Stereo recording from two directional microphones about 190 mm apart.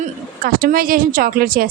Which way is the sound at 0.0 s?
50° right (ahead or behind).